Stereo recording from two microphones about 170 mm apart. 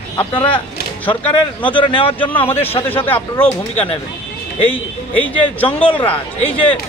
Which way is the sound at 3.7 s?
35° left (ahead or behind).